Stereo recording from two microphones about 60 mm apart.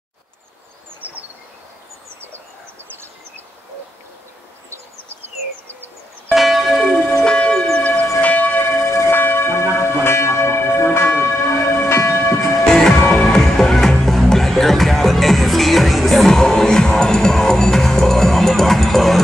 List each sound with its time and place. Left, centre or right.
1.0 s bird: right
6.3 s church bell: centre
6.9 s church bell: left
7.2 s church bell: centre
7.8 s church bell: left
8.6 s church bell: left
9.1 s church bell: left
12.6 s music: centre